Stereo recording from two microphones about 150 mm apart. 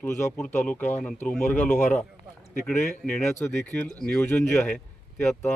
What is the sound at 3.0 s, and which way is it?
Speech, 10° left (ahead or behind).